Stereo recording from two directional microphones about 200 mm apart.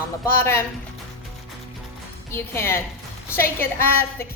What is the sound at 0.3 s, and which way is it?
Speech, 10° left (ahead or behind).